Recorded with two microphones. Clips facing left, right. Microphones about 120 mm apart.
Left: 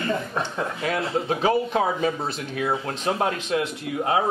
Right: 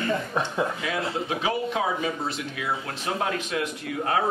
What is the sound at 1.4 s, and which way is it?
Speech, 35° left (ahead or behind).